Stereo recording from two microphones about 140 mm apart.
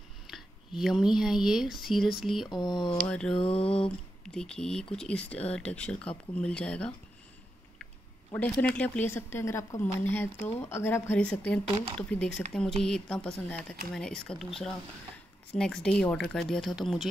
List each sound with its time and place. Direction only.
0.3 s speech: centre (ahead or behind)
2.5 s speech: 30° left (ahead or behind)
2.8 s speech: 5° left (ahead or behind)
3.3 s a sound: 45° left (ahead or behind)
4.3 s speech: 5° left (ahead or behind)
8.3 s speech: 10° left (ahead or behind)